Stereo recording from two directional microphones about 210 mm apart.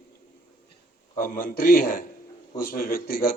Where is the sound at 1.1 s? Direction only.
40° left (ahead or behind).